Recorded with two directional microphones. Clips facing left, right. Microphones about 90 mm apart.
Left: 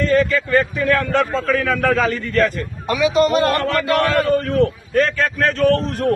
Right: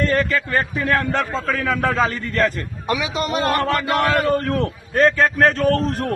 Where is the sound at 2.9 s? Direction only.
20° right (ahead or behind).